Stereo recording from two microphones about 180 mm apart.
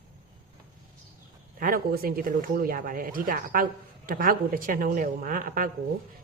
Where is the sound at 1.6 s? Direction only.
50° right (ahead or behind).